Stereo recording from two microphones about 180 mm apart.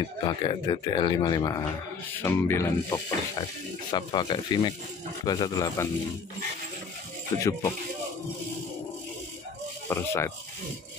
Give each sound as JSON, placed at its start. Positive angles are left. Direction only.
{"t": 0.0, "sound": "speech", "side_deg": 25}
{"t": 7.3, "sound": "speech", "side_deg": 20}
{"t": 9.8, "sound": "speech", "side_deg": 15}